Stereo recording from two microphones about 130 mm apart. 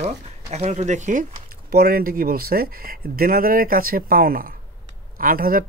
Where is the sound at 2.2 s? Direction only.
90° right.